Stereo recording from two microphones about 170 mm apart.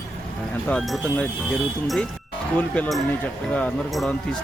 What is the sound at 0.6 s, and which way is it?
Speech, centre (ahead or behind).